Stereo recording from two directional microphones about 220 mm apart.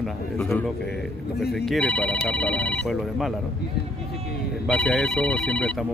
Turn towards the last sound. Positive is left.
turn(degrees=5)  # may be behind; listen again after turning